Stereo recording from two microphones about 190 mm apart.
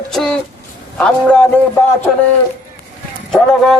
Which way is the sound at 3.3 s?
Centre (ahead or behind).